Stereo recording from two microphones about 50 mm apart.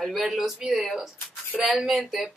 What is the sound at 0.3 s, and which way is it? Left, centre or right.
Speech, centre.